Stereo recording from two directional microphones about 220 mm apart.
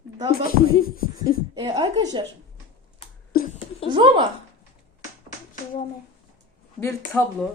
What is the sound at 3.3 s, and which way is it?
Speech, 40° left (ahead or behind).